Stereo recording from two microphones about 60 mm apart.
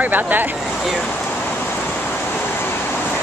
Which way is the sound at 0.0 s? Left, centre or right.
Right.